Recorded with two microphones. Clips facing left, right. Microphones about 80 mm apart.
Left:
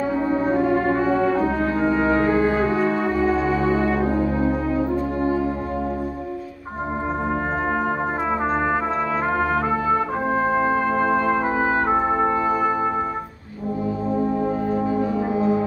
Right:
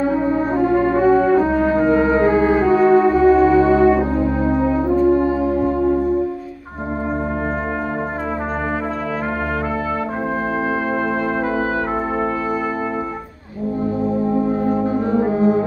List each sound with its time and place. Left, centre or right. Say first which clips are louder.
1.8 s music: right 3 dB; centre
3.0 s music: right 8 dB; centre
14.9 s music: right 4 dB; right